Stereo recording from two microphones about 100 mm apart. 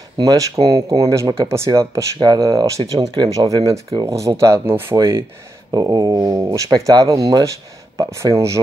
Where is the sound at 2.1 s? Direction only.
45° right (ahead or behind); by 4.9 s 25° right (ahead or behind).